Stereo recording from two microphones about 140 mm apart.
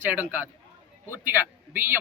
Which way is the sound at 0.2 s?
10° right (ahead or behind).